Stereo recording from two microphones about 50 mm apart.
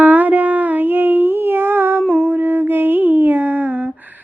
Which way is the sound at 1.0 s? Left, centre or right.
Right.